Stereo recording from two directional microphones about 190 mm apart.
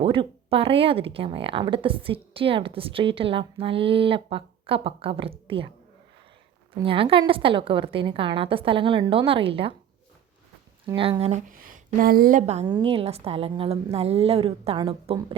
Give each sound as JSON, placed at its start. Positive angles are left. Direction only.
{"t": 0.0, "sound": "speech", "side_deg": -30}
{"t": 6.7, "sound": "speech", "side_deg": -30}
{"t": 11.2, "sound": "speech", "side_deg": -35}
{"t": 12.6, "sound": "a woman's voice", "side_deg": -25}